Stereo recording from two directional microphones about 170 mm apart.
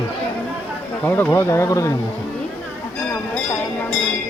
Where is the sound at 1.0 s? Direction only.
10° left (ahead or behind).